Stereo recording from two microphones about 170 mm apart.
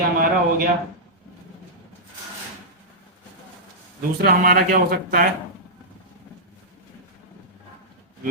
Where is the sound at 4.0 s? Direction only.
60° right (ahead or behind).